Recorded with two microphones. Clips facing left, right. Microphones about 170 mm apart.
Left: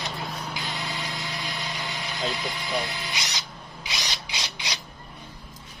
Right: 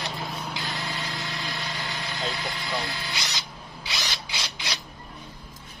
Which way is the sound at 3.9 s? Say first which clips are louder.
Even; 20° left (ahead or behind).